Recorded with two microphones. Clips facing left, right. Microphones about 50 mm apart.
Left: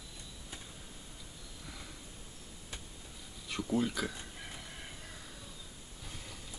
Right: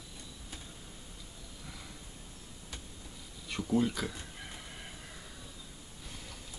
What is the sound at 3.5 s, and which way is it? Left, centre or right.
Speech, centre.